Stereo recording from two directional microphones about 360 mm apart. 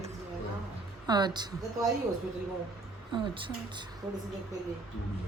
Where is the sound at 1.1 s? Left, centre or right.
Centre.